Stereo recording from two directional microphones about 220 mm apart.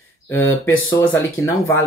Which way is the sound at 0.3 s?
10° left (ahead or behind).